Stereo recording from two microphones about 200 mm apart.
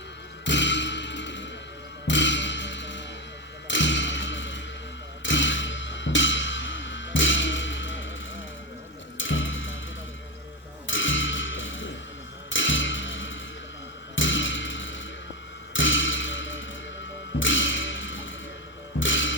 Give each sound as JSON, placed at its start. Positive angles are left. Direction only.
{"t": 0.4, "sound": "music", "side_deg": 65}
{"t": 3.7, "sound": "thump", "side_deg": 65}
{"t": 5.2, "sound": "music", "side_deg": 70}
{"t": 9.1, "sound": "music", "side_deg": 75}
{"t": 10.8, "sound": "a sound", "side_deg": 70}
{"t": 12.5, "sound": "music", "side_deg": 70}
{"t": 15.7, "sound": "a sound", "side_deg": 70}
{"t": 17.4, "sound": "music", "side_deg": 70}